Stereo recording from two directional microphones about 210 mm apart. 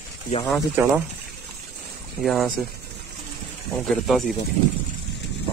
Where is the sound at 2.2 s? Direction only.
Centre (ahead or behind).